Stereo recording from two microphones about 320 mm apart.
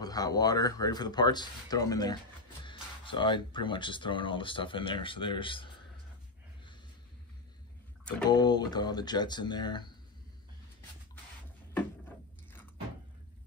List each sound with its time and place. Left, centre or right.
0.0 s speech: centre
8.0 s speech: centre